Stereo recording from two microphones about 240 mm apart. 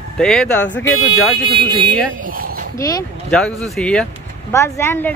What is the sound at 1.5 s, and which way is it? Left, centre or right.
Speech, right.